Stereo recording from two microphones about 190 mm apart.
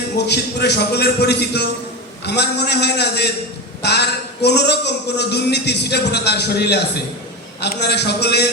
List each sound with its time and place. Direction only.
0.3 s a man's voice: 60° left (ahead or behind)